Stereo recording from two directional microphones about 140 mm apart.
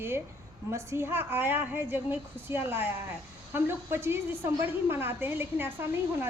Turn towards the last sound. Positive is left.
turn(degrees=-15)  # may be behind; listen again after turning